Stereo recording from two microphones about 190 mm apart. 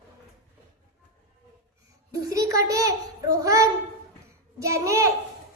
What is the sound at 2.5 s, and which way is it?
A child's voice, 20° right (ahead or behind).